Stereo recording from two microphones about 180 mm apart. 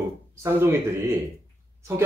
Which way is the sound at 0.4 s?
15° right (ahead or behind).